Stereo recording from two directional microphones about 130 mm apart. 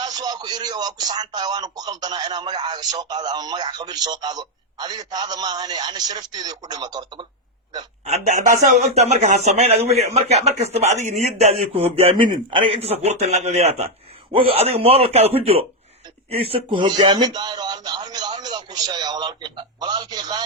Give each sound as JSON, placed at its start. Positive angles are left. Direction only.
{"t": 0.0, "sound": "speech", "side_deg": -30}
{"t": 8.0, "sound": "speech", "side_deg": -60}
{"t": 14.3, "sound": "speech", "side_deg": -45}